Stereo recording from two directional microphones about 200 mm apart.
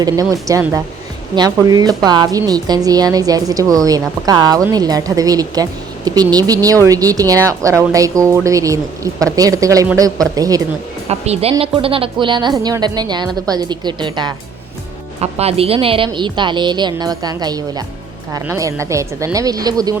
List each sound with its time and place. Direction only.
0.0 s a woman's voice: 15° right (ahead or behind)
11.1 s a woman's voice: 30° right (ahead or behind)